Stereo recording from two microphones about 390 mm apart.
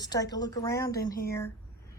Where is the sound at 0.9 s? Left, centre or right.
Left.